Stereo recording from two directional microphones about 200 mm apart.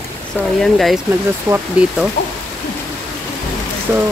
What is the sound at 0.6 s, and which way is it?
Speech, centre (ahead or behind).